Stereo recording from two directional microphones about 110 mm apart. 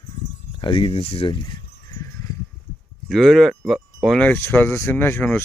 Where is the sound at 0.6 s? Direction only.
50° left (ahead or behind).